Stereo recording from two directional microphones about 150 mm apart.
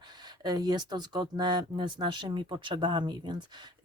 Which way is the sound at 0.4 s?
25° right (ahead or behind).